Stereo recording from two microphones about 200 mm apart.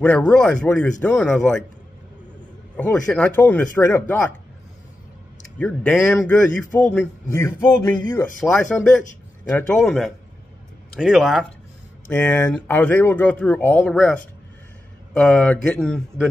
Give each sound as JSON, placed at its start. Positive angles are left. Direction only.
{"t": 0.0, "sound": "a man's voice", "side_deg": 5}
{"t": 2.8, "sound": "speech", "side_deg": 5}
{"t": 5.6, "sound": "a man's voice", "side_deg": 5}
{"t": 12.1, "sound": "a man's voice", "side_deg": 10}